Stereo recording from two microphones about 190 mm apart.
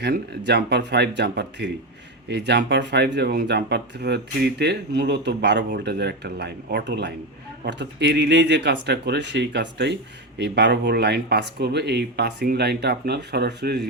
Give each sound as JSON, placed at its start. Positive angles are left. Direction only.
{"t": 0.0, "sound": "speech", "side_deg": -65}